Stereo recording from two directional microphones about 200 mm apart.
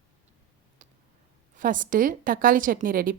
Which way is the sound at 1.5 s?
40° right (ahead or behind).